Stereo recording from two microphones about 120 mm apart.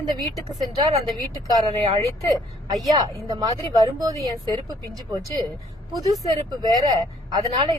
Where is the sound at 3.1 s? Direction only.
30° right (ahead or behind).